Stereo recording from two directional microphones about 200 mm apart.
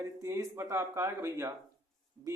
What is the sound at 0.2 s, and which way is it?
Speech, 15° right (ahead or behind).